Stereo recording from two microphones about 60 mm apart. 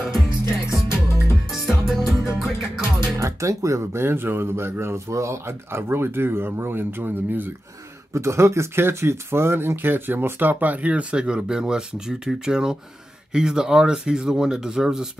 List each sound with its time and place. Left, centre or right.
0.8 s music: left
1.5 s music: centre
3.2 s speech: right
4.0 s speech: right
5.0 s speech: right
8.1 s speech: right; by 15.0 s centre